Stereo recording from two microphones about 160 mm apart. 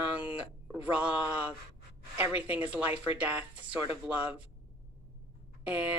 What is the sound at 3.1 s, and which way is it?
Speech, 10° right (ahead or behind).